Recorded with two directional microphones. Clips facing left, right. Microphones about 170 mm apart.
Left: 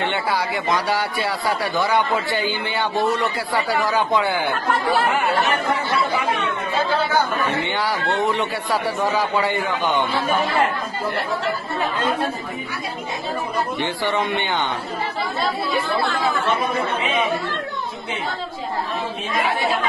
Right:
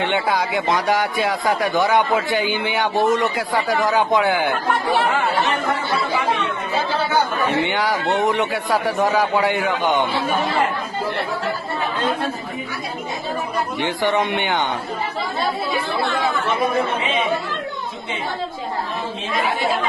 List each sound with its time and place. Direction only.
0.0 s speech: 15° right (ahead or behind)
7.4 s speech: 15° right (ahead or behind)
13.7 s speech: 15° right (ahead or behind)